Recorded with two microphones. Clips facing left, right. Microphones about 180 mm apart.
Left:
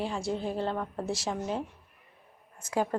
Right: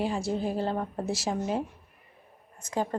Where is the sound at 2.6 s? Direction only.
5° left (ahead or behind).